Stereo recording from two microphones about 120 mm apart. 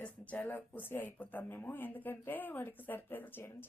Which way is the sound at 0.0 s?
15° left (ahead or behind).